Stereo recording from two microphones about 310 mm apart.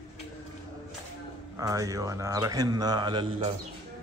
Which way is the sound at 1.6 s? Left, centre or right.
Centre.